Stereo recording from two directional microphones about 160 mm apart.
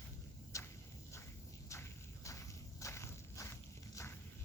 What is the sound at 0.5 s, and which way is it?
Walk, 20° left (ahead or behind).